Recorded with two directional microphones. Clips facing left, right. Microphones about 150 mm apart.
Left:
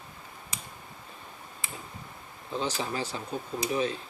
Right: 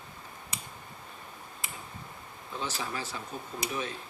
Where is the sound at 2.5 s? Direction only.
30° left (ahead or behind).